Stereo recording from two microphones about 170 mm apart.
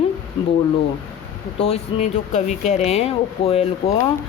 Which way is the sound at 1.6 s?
40° left (ahead or behind).